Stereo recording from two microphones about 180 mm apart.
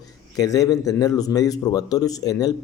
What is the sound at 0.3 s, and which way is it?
A man's voice, 20° left (ahead or behind).